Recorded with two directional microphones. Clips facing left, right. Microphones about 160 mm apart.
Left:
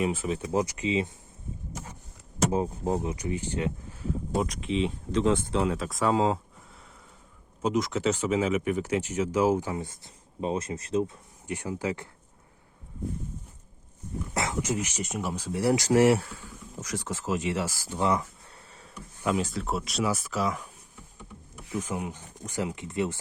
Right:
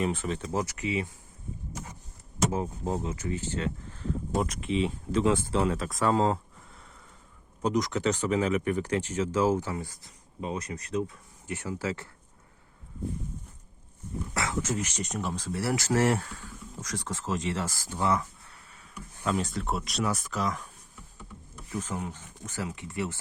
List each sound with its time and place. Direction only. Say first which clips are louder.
0.0 s speech: left 2 dB; 5° left (ahead or behind); by 1.1 s 20° left (ahead or behind)
2.5 s speech: left 3 dB; 20° left (ahead or behind)
4.4 s speech: left 1 dB; centre (ahead or behind)
7.6 s speech: left 1 dB; 5° left (ahead or behind); by 12.0 s 20° left (ahead or behind)
14.3 s speech: left 1 dB; 20° left (ahead or behind)
19.2 s speech: left 2 dB; 5° left (ahead or behind)
21.8 s speech: left 2 dB; 15° left (ahead or behind)